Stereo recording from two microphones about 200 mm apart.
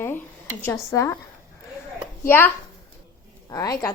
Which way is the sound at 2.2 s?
10° left (ahead or behind).